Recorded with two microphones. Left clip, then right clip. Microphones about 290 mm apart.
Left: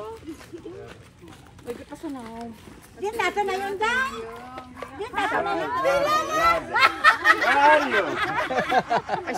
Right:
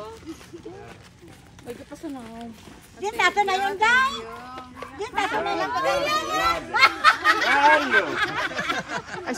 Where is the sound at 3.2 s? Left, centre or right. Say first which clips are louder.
Right 5 dB; centre.